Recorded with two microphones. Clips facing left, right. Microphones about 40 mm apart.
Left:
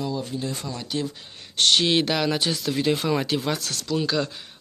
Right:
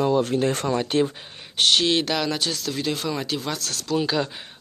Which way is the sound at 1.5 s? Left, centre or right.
Centre.